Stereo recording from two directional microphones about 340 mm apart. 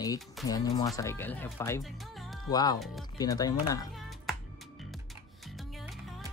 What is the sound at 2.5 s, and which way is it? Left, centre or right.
Speech, centre.